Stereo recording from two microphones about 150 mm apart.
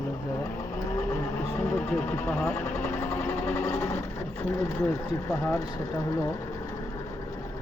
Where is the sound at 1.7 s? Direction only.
10° left (ahead or behind).